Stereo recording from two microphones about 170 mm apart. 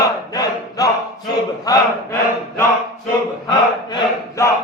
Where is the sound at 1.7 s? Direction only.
20° left (ahead or behind).